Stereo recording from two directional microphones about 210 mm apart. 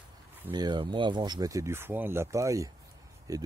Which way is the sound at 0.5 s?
20° right (ahead or behind).